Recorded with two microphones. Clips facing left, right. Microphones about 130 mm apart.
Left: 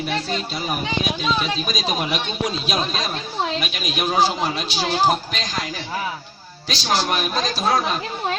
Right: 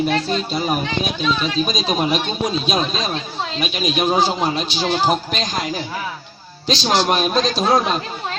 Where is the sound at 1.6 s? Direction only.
25° right (ahead or behind).